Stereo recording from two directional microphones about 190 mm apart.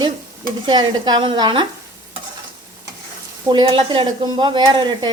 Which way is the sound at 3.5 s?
25° right (ahead or behind).